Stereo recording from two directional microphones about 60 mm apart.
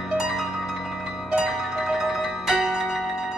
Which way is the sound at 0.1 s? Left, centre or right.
Centre.